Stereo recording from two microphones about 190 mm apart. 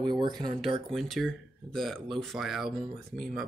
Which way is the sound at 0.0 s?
25° right (ahead or behind).